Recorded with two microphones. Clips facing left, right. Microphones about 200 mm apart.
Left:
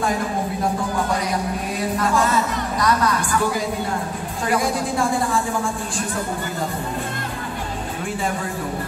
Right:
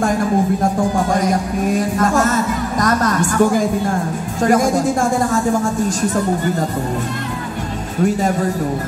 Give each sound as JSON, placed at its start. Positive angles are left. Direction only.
{"t": 0.9, "sound": "speech", "side_deg": -45}
{"t": 8.0, "sound": "a man's voice", "side_deg": -40}